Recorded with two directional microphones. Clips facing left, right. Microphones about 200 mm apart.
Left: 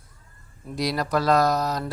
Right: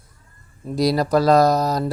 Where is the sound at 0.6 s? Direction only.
35° right (ahead or behind).